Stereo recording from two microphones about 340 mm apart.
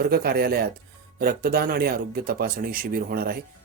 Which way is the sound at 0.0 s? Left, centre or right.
Right.